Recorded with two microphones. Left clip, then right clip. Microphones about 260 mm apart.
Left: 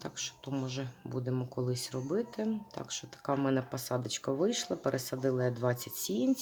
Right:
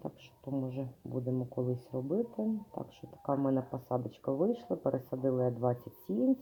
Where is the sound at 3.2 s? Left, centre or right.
Left.